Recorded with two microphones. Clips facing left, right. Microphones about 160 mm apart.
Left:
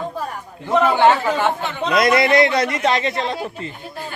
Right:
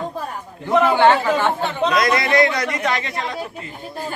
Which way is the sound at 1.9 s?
25° left (ahead or behind).